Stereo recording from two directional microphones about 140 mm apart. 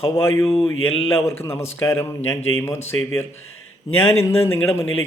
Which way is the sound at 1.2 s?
20° left (ahead or behind).